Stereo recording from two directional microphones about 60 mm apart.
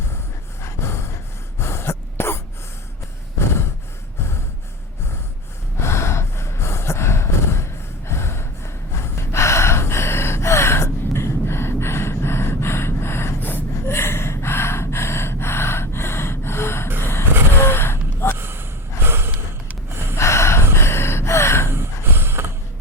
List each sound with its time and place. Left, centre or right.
0.6 s gasp: left
1.5 s throat clearing: left
5.8 s gasp: left
17.0 s vehicle: left
17.6 s gasp: left
18.3 s gasp: right
19.0 s snort: right
20.1 s gasp: left
21.7 s a sound: right